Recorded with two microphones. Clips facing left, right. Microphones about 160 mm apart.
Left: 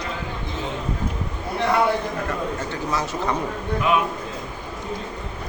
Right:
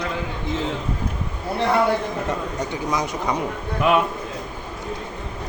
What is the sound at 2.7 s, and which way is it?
Speech, 15° right (ahead or behind).